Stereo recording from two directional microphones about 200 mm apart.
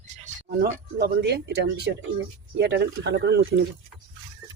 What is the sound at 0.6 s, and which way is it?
Speech, 55° right (ahead or behind).